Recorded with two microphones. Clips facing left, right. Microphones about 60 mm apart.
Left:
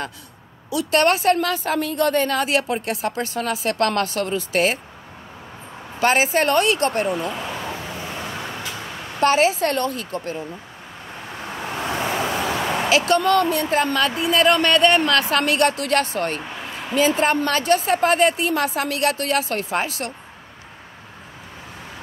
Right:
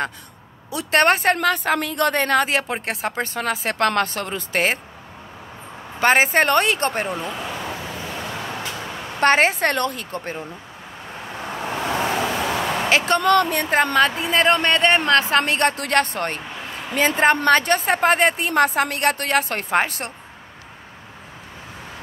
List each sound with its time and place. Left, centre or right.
0.7 s a woman's voice: right
2.4 s speech: right
5.9 s a woman's voice: right
7.2 s a sound: centre
9.2 s a woman's voice: right
11.4 s vehicle: centre
12.9 s speech: right
13.2 s a woman's voice: right
13.9 s speech: right
16.4 s a sound: centre
16.9 s a woman's voice: right